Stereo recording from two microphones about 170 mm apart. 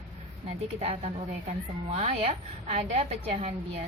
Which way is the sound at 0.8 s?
40° right (ahead or behind).